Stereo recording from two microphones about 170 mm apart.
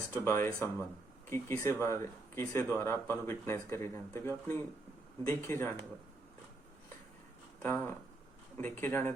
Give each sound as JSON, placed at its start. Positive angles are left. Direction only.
{"t": 0.1, "sound": "speech", "side_deg": 15}
{"t": 7.6, "sound": "speech", "side_deg": 10}